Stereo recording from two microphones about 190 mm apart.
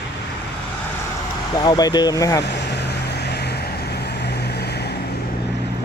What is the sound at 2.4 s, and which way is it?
Vehicle, 60° left (ahead or behind).